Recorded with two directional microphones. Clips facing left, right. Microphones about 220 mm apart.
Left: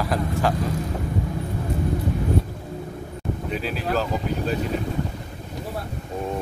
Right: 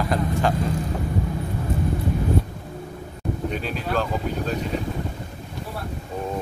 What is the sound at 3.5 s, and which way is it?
Speech, 5° left (ahead or behind).